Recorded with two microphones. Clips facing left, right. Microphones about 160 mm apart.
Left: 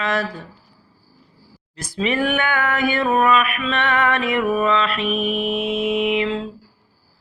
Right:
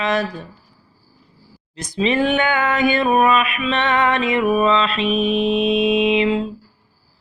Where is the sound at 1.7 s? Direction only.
20° right (ahead or behind).